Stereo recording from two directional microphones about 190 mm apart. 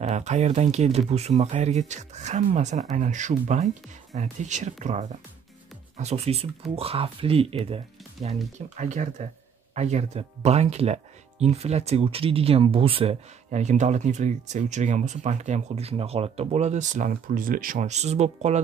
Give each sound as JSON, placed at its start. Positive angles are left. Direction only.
{"t": 0.0, "sound": "speech", "side_deg": -35}